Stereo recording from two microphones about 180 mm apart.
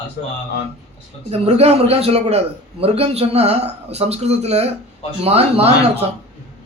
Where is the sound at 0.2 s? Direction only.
60° left (ahead or behind).